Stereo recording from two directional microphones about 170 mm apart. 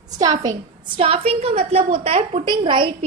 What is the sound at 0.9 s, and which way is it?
A woman's voice, 35° right (ahead or behind).